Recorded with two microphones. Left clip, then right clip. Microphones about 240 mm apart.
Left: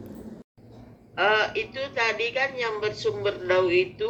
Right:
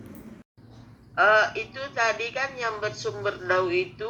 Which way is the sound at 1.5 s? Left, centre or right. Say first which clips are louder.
Left 3 dB; centre.